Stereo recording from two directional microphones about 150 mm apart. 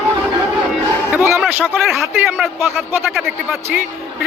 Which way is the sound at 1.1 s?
15° right (ahead or behind).